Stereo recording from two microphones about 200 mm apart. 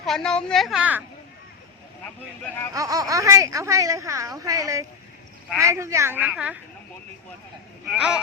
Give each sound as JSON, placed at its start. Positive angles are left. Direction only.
{"t": 0.0, "sound": "a woman's voice", "side_deg": 0}
{"t": 2.7, "sound": "speech", "side_deg": -15}
{"t": 7.9, "sound": "a woman's voice", "side_deg": -5}